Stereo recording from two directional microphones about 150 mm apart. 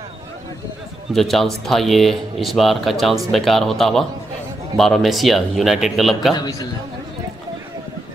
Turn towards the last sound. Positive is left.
turn(degrees=25)  # may be behind; listen again after turning